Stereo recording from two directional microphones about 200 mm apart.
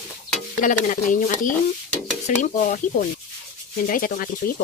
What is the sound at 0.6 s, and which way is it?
Speech, 40° left (ahead or behind).